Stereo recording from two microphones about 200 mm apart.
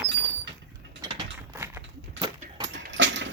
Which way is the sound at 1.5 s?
15° right (ahead or behind).